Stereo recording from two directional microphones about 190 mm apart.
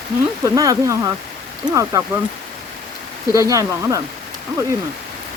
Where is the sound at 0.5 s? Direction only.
20° right (ahead or behind).